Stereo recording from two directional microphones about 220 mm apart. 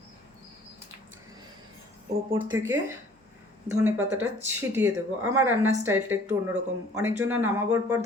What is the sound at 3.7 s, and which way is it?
A woman's voice, 10° right (ahead or behind).